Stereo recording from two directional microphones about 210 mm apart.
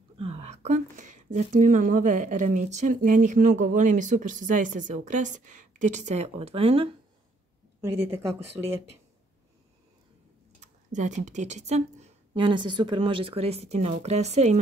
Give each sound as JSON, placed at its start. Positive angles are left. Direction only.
{"t": 0.2, "sound": "speech", "side_deg": -30}
{"t": 7.8, "sound": "speech", "side_deg": -15}
{"t": 10.6, "sound": "speech", "side_deg": -35}